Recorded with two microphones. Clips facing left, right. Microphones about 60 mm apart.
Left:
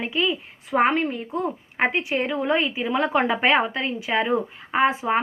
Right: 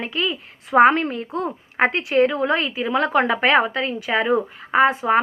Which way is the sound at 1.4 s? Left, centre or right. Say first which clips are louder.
Right 4 dB; right.